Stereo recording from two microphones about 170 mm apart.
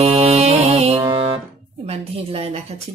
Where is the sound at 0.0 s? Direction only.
35° right (ahead or behind).